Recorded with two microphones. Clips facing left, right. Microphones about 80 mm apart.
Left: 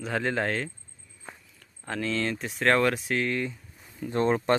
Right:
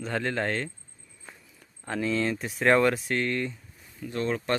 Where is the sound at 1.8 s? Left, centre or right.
Centre.